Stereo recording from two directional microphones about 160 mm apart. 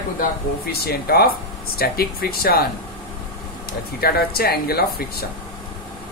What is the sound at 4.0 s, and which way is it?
Speech, 75° left (ahead or behind).